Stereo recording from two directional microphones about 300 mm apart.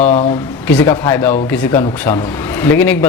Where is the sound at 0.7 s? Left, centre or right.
Centre.